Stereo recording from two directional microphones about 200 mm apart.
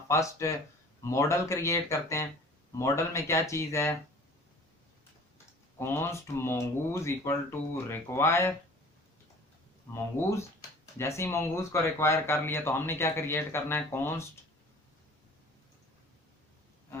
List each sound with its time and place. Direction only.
0.1 s speech: 15° left (ahead or behind)
5.8 s speech: 10° left (ahead or behind)
9.9 s speech: 15° left (ahead or behind)